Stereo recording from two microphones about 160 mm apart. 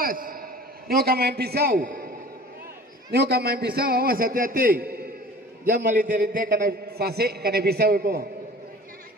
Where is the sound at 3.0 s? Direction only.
80° right.